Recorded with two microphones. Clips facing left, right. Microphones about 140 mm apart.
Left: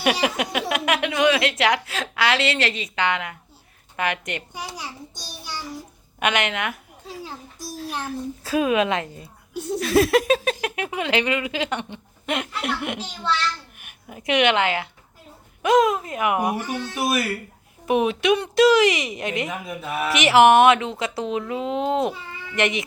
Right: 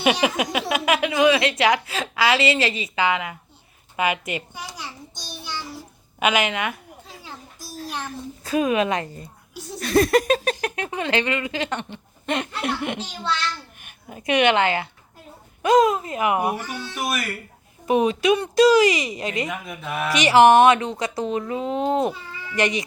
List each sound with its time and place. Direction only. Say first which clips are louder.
0.0 s a woman's voice: right 1 dB; centre (ahead or behind)
6.1 s speech: right 2 dB; centre (ahead or behind)
7.8 s a woman's voice: left 2 dB; 5° left (ahead or behind)
16.8 s speech: left 3 dB; 40° left (ahead or behind)
17.8 s speech: right 1 dB; 5° left (ahead or behind)